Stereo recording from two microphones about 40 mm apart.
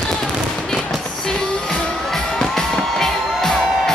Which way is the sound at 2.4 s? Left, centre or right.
Centre.